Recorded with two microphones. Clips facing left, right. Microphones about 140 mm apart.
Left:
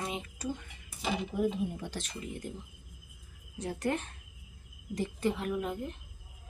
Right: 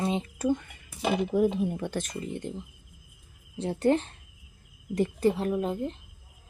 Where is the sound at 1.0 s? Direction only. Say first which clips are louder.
Right 7 dB; 80° right.